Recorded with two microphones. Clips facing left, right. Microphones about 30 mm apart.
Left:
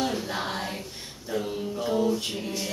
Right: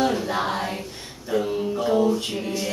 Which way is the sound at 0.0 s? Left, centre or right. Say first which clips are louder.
Right 6 dB; centre.